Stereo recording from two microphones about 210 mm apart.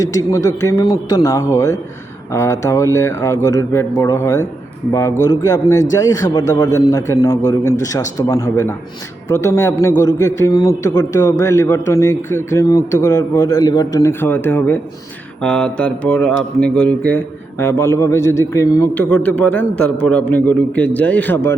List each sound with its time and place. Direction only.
0.0 s speech: 15° left (ahead or behind)